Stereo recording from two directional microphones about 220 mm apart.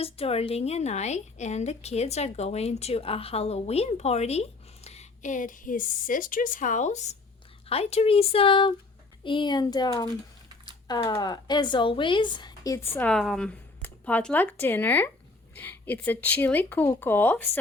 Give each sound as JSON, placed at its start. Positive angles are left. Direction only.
{"t": 0.0, "sound": "a woman's voice", "side_deg": 25}
{"t": 13.0, "sound": "speech", "side_deg": 5}